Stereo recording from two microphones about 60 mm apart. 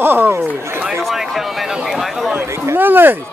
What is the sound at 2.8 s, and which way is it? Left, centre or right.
Speech, right.